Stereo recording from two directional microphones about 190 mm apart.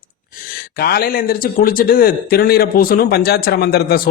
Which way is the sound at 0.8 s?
55° left (ahead or behind).